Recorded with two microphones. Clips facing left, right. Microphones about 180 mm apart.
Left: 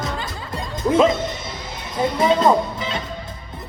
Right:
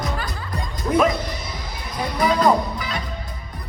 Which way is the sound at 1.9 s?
25° left (ahead or behind).